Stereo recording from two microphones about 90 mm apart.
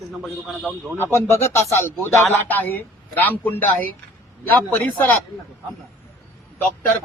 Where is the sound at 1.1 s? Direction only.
30° left (ahead or behind).